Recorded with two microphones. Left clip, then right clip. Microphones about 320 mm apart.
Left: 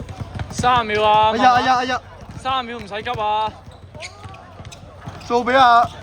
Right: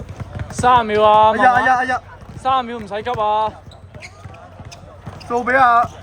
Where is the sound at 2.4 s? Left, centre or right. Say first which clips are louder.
Right 4 dB; right.